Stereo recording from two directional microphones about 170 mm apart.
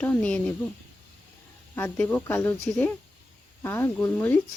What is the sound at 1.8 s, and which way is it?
Speech, 10° left (ahead or behind).